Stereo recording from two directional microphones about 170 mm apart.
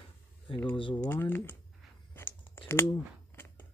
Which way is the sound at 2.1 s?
15° left (ahead or behind).